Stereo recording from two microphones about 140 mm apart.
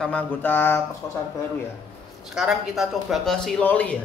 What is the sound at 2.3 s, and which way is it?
A woman's voice, 5° right (ahead or behind).